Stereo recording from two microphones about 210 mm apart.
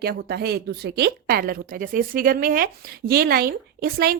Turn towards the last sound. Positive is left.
turn(degrees=-45)  # may be behind; listen again after turning